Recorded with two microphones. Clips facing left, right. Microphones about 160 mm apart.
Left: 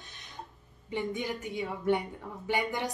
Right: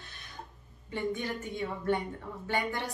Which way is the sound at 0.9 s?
15° left (ahead or behind).